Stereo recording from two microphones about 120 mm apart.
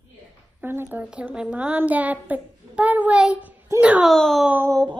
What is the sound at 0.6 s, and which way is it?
A woman's voice, 15° right (ahead or behind).